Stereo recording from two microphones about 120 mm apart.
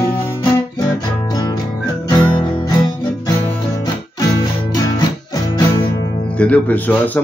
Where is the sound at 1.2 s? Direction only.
35° left (ahead or behind).